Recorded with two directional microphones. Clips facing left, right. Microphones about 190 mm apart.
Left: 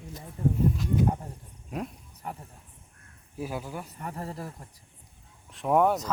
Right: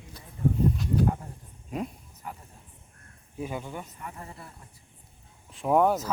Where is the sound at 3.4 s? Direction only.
5° left (ahead or behind).